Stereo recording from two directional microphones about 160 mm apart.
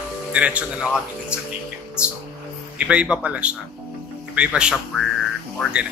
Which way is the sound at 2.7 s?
5° right (ahead or behind).